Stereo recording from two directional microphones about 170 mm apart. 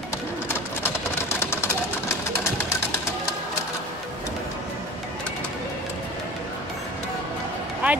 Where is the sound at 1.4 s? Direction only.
15° left (ahead or behind).